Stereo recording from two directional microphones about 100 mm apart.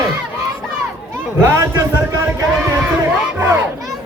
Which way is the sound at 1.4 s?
30° right (ahead or behind).